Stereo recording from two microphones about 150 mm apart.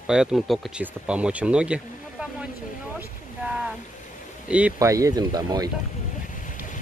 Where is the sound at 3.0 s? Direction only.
5° right (ahead or behind).